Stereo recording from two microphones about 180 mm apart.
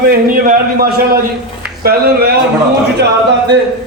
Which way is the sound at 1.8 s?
60° right (ahead or behind).